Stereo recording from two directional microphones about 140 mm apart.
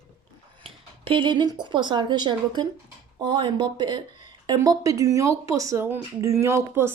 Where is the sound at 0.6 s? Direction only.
40° right (ahead or behind).